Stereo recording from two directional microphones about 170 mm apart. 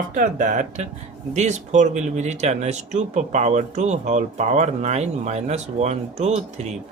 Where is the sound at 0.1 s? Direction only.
50° right (ahead or behind).